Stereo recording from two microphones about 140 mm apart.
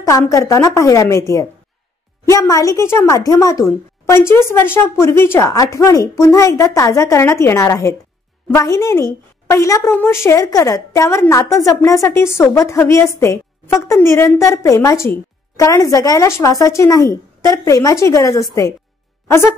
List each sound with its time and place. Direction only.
0.0 s a woman's voice: 20° left (ahead or behind)